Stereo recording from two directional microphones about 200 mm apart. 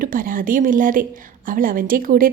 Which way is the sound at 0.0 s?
45° right (ahead or behind).